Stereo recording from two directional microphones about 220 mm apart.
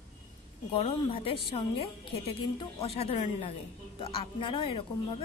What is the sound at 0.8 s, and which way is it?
Speech, 25° left (ahead or behind).